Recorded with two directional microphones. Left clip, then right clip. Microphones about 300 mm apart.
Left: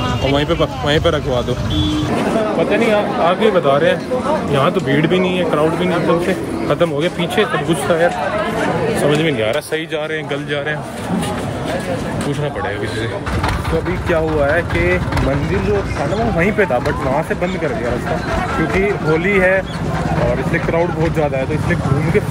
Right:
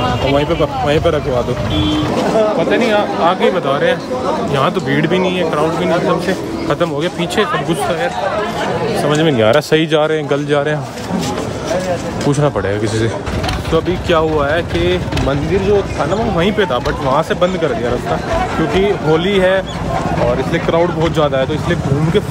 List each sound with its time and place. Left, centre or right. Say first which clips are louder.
0.3 s speech: even; centre
2.9 s speech: right 1 dB; centre
6.7 s speech: even; centre
9.2 s speech: right 5 dB; right
18.8 s speech: right 4 dB; centre